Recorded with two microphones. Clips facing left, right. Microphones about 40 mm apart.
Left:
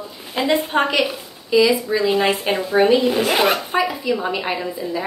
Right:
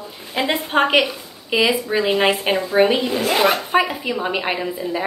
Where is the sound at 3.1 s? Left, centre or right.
Centre.